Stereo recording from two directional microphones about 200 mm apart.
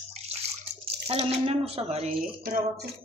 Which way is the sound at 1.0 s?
30° right (ahead or behind).